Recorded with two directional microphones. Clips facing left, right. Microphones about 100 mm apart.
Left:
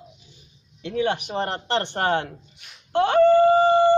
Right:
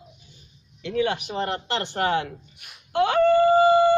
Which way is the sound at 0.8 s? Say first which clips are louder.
Even; 25° left (ahead or behind).